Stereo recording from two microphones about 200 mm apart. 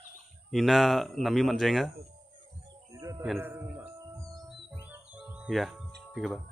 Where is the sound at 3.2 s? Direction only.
5° right (ahead or behind).